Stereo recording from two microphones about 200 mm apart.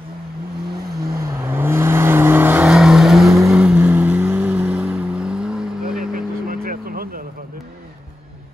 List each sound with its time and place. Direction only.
1.2 s vehicle: 10° right (ahead or behind)
5.9 s vehicle: 45° right (ahead or behind)